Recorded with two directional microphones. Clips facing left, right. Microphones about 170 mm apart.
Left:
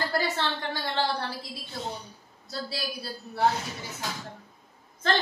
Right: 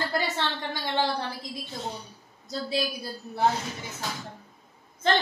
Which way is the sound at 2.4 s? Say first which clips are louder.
Right 5 dB; 20° right (ahead or behind).